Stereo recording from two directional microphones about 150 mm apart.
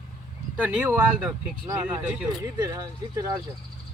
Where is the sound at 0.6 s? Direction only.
10° right (ahead or behind).